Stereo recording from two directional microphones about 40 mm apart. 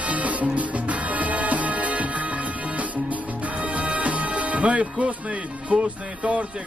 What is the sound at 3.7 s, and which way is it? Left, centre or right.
Music, right.